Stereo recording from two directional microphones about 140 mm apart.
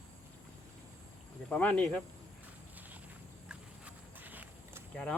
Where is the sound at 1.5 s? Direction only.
10° left (ahead or behind).